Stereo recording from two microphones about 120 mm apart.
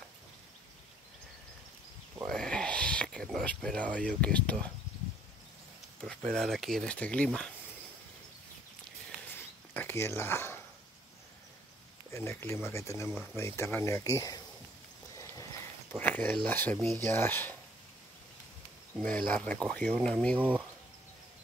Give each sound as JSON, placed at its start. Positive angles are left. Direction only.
{"t": 2.2, "sound": "owl", "side_deg": 5}
{"t": 6.3, "sound": "speech", "side_deg": 0}
{"t": 9.3, "sound": "a sound", "side_deg": 20}
{"t": 12.1, "sound": "speech", "side_deg": 20}
{"t": 15.1, "sound": "a sound", "side_deg": 25}
{"t": 16.0, "sound": "speech", "side_deg": 15}
{"t": 18.9, "sound": "speech", "side_deg": 10}
{"t": 20.3, "sound": "speech", "side_deg": -15}